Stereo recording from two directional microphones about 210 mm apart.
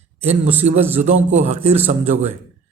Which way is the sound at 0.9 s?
35° right (ahead or behind).